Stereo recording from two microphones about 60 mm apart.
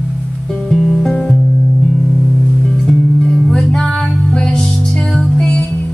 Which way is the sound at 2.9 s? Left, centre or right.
Centre.